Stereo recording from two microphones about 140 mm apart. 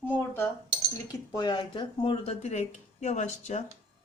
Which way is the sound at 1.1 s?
30° left (ahead or behind).